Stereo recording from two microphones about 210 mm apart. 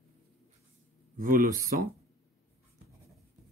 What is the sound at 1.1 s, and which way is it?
Speech, 40° right (ahead or behind).